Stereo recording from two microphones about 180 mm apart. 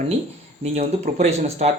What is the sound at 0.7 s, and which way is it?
Speech, 40° right (ahead or behind).